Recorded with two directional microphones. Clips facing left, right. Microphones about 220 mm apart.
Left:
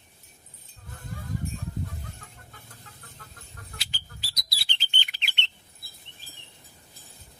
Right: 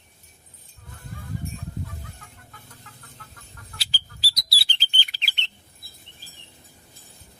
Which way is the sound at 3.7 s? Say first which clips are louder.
Right 3 dB; 35° right (ahead or behind).